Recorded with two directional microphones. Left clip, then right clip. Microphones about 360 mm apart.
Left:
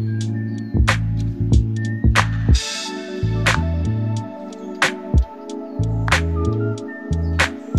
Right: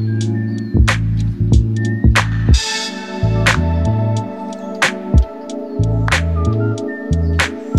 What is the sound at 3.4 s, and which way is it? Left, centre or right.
Music, left.